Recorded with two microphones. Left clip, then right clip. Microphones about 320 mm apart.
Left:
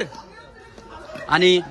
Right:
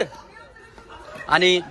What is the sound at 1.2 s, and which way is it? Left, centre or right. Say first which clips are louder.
Speech: left 1 dB; centre.